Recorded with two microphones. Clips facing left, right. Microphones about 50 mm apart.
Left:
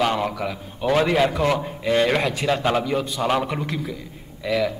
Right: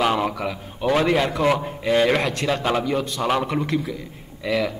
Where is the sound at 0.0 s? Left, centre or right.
Centre.